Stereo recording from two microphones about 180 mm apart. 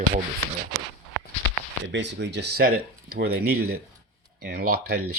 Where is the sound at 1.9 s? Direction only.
75° right (ahead or behind).